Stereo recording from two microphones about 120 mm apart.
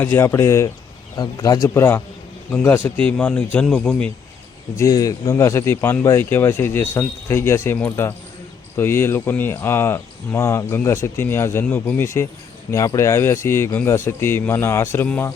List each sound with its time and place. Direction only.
0.0 s a man's voice: 20° left (ahead or behind)
4.8 s speech: 30° left (ahead or behind); by 15.3 s 15° left (ahead or behind)